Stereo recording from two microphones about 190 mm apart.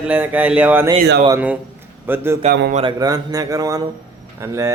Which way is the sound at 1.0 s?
55° right (ahead or behind).